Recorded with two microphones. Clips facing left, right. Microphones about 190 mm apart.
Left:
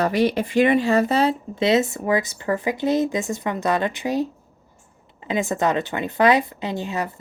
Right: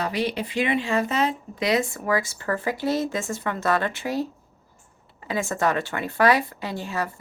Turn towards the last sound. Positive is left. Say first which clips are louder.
# left 3 dB
turn(degrees=20)  # may be behind; listen again after turning